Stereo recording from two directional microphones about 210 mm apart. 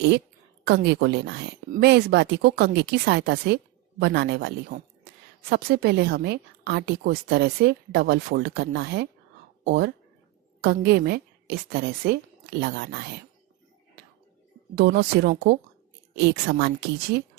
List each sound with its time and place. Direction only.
0.6 s a woman's voice: 55° right (ahead or behind)
14.8 s a woman's voice: 45° right (ahead or behind)